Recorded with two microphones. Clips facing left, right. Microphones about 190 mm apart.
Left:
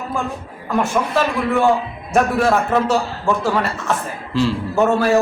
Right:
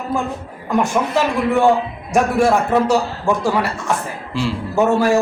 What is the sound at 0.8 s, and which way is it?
Speech, 15° right (ahead or behind).